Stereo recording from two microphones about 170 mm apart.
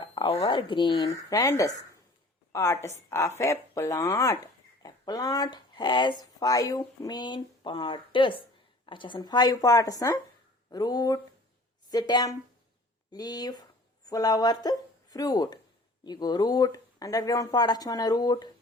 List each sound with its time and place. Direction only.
0.0 s a woman's voice: 30° left (ahead or behind)